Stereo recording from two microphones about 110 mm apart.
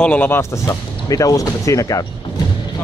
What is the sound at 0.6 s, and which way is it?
Speech, 30° left (ahead or behind).